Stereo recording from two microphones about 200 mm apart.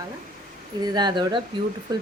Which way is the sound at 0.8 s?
20° right (ahead or behind).